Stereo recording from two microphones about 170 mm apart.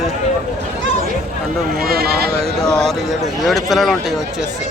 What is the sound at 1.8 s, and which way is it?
Speech, 65° right (ahead or behind).